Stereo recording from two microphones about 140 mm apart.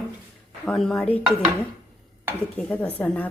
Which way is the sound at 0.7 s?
5° left (ahead or behind).